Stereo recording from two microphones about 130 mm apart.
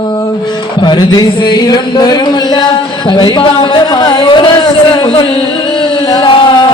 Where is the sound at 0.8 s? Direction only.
35° left (ahead or behind).